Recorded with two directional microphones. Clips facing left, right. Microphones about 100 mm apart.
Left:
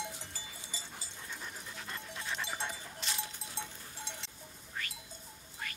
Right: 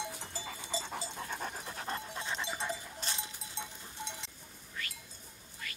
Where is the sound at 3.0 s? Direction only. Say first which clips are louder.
Left 4 dB; 30° right (ahead or behind).